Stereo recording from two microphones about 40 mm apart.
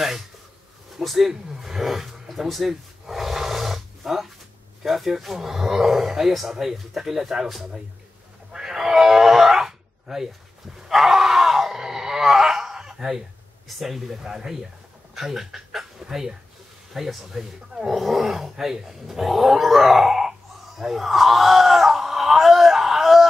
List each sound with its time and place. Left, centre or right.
0.9 s speech: centre
8.5 s cat: centre
10.8 s a sound: centre
13.7 s speech: centre
17.9 s dog: centre